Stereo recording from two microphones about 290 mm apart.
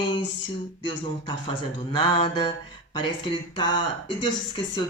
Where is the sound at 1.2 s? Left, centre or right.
Centre.